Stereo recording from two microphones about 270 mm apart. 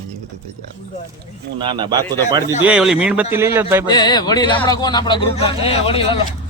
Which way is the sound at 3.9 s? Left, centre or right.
Centre.